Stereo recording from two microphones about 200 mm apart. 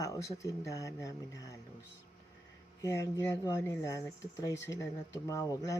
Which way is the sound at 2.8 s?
15° left (ahead or behind).